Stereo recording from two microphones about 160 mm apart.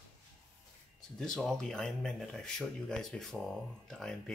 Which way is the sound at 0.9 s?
5° left (ahead or behind).